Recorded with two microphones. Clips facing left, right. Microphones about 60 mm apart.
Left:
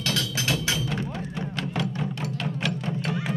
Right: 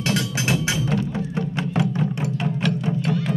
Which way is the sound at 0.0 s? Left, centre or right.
Right.